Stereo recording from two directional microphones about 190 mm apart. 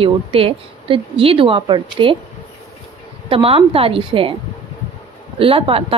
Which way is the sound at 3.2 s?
30° right (ahead or behind).